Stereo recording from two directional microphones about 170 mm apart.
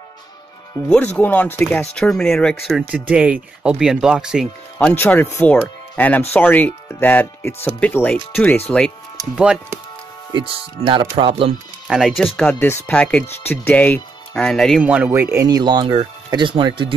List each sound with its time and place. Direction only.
0.8 s speech: 5° left (ahead or behind)
4.7 s speech: 10° left (ahead or behind); by 9.8 s 5° right (ahead or behind)
10.3 s speech: 35° right (ahead or behind)
11.9 s speech: centre (ahead or behind)
14.8 s speech: 10° right (ahead or behind); by 16.9 s 30° right (ahead or behind)